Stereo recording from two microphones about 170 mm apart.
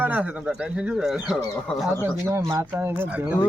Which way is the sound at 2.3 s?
15° right (ahead or behind).